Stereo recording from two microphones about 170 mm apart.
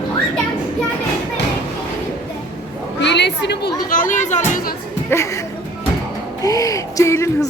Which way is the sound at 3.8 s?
50° left (ahead or behind).